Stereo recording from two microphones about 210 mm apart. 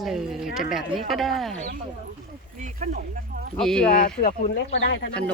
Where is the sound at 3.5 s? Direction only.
5° left (ahead or behind).